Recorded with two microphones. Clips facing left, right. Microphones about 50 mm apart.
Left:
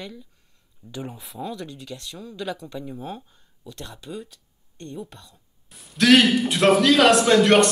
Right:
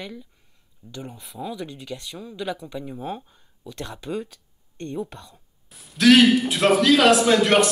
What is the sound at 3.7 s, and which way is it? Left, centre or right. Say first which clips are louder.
Speech: right 5 dB; right.